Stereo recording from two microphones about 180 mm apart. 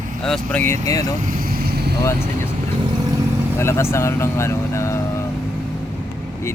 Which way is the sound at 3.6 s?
15° left (ahead or behind).